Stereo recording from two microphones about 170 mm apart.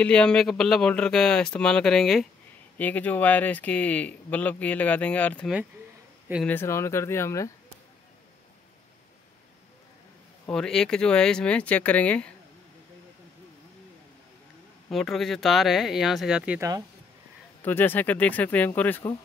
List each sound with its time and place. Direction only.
0.0 s speech: 5° left (ahead or behind)
10.5 s speech: 5° left (ahead or behind)
14.9 s speech: centre (ahead or behind)
17.6 s speech: 10° left (ahead or behind)